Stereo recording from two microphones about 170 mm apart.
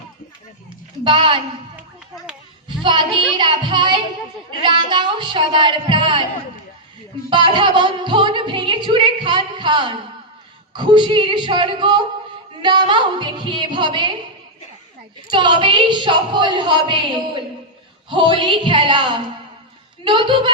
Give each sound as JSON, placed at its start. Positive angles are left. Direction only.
{"t": 1.0, "sound": "a woman's voice", "side_deg": -30}
{"t": 2.8, "sound": "a woman's voice", "side_deg": -30}
{"t": 7.3, "sound": "music", "side_deg": -30}
{"t": 10.8, "sound": "a woman's voice", "side_deg": -25}
{"t": 15.3, "sound": "a woman's voice", "side_deg": -30}